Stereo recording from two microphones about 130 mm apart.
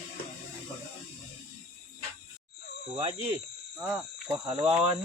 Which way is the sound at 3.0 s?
45° right (ahead or behind).